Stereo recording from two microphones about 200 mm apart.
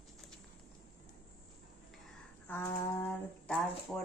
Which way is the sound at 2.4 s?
10° left (ahead or behind).